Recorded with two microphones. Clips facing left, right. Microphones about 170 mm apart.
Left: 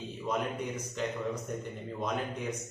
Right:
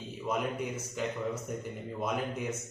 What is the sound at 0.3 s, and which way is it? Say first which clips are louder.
A man's voice: right 1 dB; 10° right (ahead or behind).